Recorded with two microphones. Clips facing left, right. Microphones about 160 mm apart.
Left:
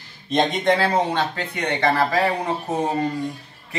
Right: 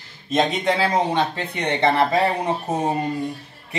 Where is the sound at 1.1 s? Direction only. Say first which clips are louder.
Right 2 dB; 25° right (ahead or behind).